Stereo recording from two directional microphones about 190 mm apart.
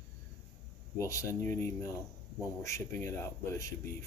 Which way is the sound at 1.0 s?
15° left (ahead or behind).